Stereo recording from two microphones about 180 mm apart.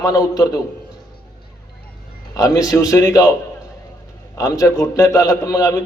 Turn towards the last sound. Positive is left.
turn(degrees=20)  # may be behind; listen again after turning